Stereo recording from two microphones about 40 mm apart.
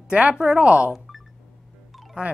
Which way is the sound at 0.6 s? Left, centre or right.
Right.